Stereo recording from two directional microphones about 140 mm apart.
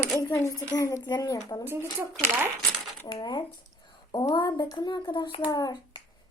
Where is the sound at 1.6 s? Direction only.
15° right (ahead or behind).